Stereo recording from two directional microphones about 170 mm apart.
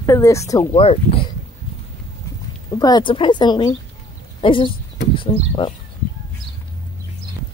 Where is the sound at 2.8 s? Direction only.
25° left (ahead or behind).